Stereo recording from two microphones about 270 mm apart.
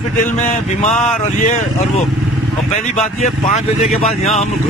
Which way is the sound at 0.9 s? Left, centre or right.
Centre.